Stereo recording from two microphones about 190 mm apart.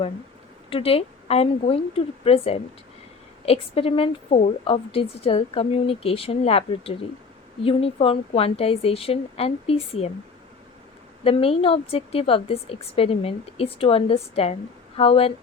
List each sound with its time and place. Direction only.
0.7 s a woman's voice: 30° left (ahead or behind)
11.2 s a woman's voice: 30° left (ahead or behind)